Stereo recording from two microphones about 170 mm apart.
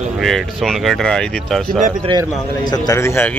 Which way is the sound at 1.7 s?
50° right (ahead or behind).